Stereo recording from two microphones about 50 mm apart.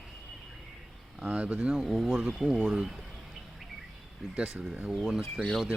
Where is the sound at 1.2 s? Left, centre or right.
Right.